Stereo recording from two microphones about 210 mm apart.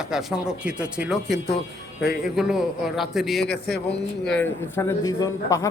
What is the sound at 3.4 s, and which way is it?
Speech, 50° left (ahead or behind).